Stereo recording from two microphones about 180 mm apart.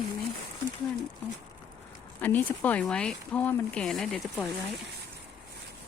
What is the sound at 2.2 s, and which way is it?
Speech, 10° left (ahead or behind).